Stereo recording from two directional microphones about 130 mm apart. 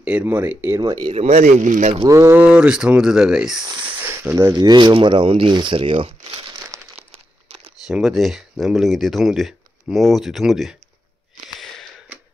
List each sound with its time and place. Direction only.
0.0 s speech: 15° right (ahead or behind)
1.1 s speech: 55° right (ahead or behind); by 2.0 s 70° right (ahead or behind)
2.0 s speech: 20° right (ahead or behind)
2.4 s speech: 10° right (ahead or behind)
4.0 s speech: 20° right (ahead or behind)
4.6 s speech: 35° right (ahead or behind)
5.9 s crumpling: 50° right (ahead or behind)
7.8 s speech: 5° right (ahead or behind)